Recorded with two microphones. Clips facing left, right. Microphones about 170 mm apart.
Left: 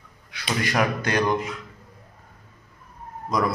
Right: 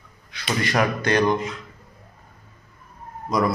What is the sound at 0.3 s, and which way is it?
Speech, 10° left (ahead or behind).